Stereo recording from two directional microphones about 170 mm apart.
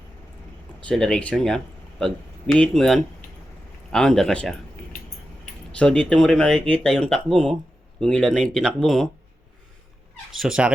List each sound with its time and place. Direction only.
0.9 s speech: 5° left (ahead or behind)
5.7 s speech: 5° left (ahead or behind)
10.3 s speech: 5° right (ahead or behind)